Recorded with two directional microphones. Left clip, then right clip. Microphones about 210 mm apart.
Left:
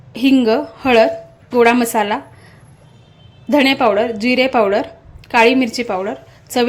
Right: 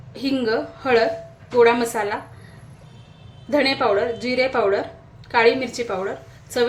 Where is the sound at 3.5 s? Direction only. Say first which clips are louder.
Left 5 dB; 40° left (ahead or behind).